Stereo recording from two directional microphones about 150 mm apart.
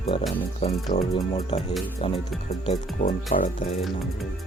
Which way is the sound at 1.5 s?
45° left (ahead or behind).